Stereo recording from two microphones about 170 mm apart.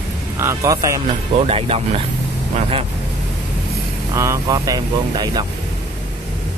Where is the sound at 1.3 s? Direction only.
35° right (ahead or behind).